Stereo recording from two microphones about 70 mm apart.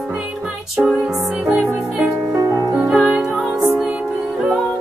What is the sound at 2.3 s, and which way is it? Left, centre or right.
Music, right.